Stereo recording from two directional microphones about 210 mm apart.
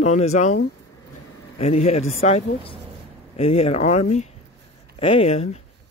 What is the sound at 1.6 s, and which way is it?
Speech, 30° left (ahead or behind).